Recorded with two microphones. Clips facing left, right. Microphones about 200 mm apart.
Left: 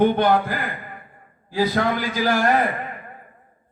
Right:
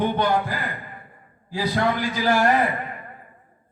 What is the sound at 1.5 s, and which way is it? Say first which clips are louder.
Speech: left 2 dB; 50° left (ahead or behind).